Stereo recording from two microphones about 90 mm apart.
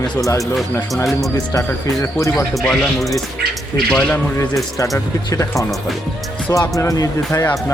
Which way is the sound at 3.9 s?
10° left (ahead or behind).